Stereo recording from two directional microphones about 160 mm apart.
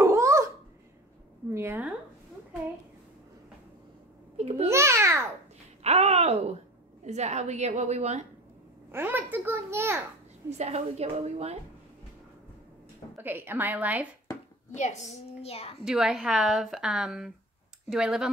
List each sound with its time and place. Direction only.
0.0 s a sound: 15° right (ahead or behind)
1.5 s a sound: 15° right (ahead or behind)
4.4 s babbling: 40° right (ahead or behind)
4.6 s babbling: 15° right (ahead or behind)
5.9 s wail: 40° right (ahead or behind)
7.1 s a woman's voice: 45° right (ahead or behind)
8.9 s a child's voice: 10° right (ahead or behind)
10.6 s a woman's voice: 45° right (ahead or behind)
13.2 s a child's voice: 15° right (ahead or behind)
14.3 s a sound: 25° left (ahead or behind)
14.7 s a child's voice: 50° left (ahead or behind)
15.8 s a woman's voice: 5° right (ahead or behind)